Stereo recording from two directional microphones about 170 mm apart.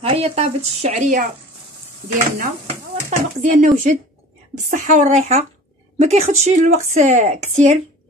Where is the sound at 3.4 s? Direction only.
50° right (ahead or behind).